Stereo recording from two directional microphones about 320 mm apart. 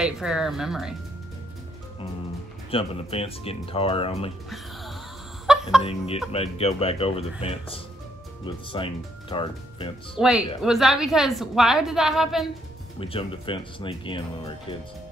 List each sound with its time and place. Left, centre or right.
0.0 s a woman's voice: centre
2.7 s speech: centre
5.5 s a sound: centre
5.8 s speech: centre
10.2 s a woman's voice: centre
13.0 s speech: centre